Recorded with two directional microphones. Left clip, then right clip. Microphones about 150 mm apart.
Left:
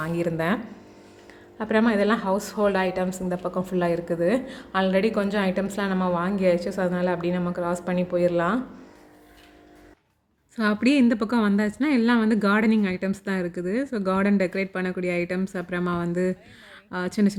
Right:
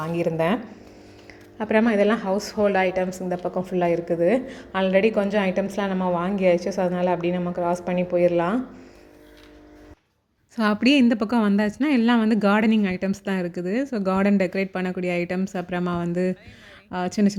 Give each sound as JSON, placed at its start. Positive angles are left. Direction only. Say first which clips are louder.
{"t": 0.0, "sound": "a woman's voice", "louder": "right 3 dB", "side_deg": 0}
{"t": 10.5, "sound": "a woman's voice", "louder": "right 2 dB", "side_deg": -20}